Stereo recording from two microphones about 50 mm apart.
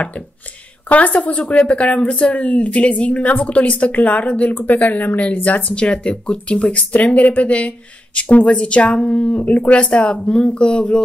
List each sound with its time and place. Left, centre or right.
0.8 s a woman's voice: left
5.6 s speech: left
9.4 s speech: left
10.1 s speech: centre